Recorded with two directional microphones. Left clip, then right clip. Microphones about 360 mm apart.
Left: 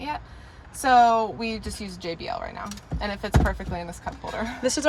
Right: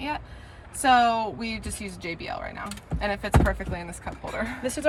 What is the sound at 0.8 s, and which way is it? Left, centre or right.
Speech, centre.